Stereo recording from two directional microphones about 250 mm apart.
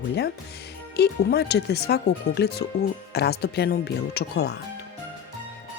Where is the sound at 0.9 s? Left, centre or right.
Left.